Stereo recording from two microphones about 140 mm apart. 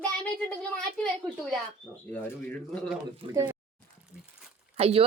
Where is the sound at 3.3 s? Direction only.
30° right (ahead or behind).